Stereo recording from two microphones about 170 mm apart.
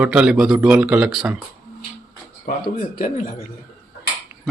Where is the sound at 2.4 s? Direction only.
55° left (ahead or behind).